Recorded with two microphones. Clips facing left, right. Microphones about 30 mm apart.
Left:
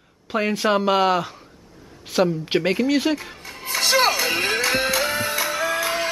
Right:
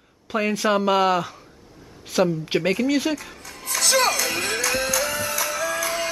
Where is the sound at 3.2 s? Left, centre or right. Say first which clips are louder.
Left 2 dB; left.